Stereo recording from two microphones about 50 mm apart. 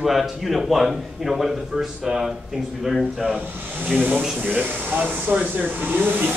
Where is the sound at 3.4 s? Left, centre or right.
Right.